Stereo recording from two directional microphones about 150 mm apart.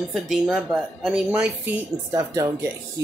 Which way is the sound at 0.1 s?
5° right (ahead or behind).